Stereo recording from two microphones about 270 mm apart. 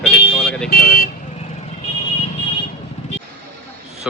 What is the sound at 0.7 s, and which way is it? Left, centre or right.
Speech, left.